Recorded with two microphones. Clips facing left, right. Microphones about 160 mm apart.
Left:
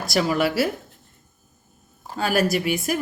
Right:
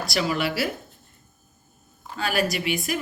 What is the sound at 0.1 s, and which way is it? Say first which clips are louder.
Speech: left 5 dB; 45° left (ahead or behind).